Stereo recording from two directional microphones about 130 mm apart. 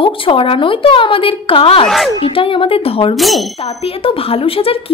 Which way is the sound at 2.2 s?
45° left (ahead or behind).